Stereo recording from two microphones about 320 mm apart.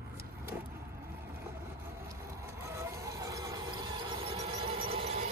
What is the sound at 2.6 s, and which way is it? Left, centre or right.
Squeal, centre.